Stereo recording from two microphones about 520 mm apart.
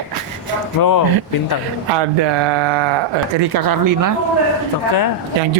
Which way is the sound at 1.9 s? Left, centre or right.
Right.